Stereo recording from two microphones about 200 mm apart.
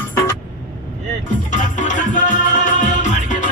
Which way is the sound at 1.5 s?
40° left (ahead or behind).